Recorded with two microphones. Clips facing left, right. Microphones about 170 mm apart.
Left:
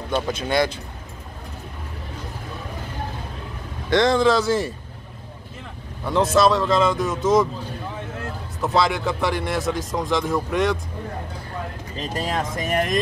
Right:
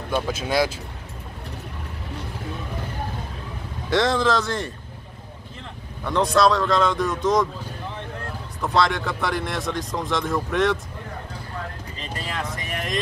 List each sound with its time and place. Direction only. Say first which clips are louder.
0.1 s speech: left 1 dB; 5° right (ahead or behind)
3.9 s speech: left 3 dB; centre (ahead or behind)
6.0 s speech: left 1 dB; 5° left (ahead or behind)
8.6 s speech: left 1 dB; centre (ahead or behind)
12.0 s speech: left 6 dB; 45° left (ahead or behind)